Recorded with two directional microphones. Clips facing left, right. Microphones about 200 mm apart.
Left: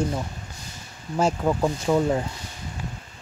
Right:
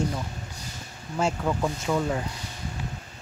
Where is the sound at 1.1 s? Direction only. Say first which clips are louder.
Left 4 dB; 40° left (ahead or behind).